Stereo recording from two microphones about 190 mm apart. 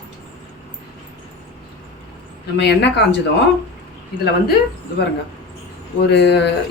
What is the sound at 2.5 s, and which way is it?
Speech, 60° left (ahead or behind).